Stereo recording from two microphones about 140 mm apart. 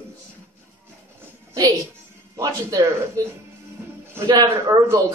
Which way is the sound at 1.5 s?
25° right (ahead or behind).